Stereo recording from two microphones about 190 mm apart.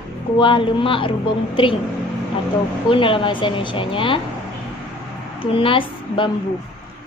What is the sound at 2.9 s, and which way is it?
A woman's voice, 25° left (ahead or behind).